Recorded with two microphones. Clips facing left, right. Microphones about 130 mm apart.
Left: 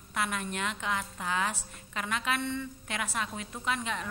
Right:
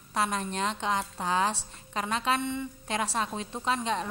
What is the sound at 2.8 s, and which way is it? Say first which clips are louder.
Speech: right 8 dB; 30° right (ahead or behind).